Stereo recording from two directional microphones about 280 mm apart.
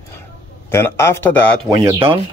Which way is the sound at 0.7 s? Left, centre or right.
Centre.